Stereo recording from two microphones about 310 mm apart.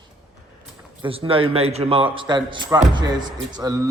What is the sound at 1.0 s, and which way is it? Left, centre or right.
A man's voice, centre.